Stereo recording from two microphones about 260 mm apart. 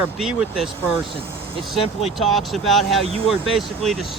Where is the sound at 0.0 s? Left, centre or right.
Centre.